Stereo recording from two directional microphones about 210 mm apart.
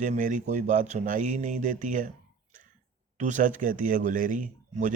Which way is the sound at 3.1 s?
35° right (ahead or behind).